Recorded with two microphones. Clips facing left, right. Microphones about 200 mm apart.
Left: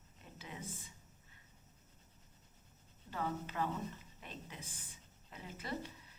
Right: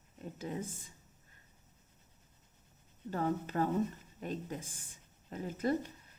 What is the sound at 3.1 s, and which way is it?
A woman's voice, 45° right (ahead or behind).